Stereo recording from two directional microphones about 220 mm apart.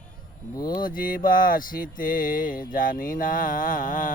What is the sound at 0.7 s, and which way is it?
Speech, 40° left (ahead or behind).